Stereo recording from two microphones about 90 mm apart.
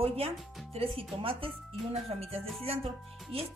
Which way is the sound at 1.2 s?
80° right.